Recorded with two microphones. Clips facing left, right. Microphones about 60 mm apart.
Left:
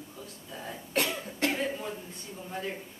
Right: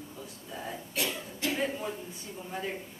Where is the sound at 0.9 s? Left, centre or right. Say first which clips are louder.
Left 5 dB; left.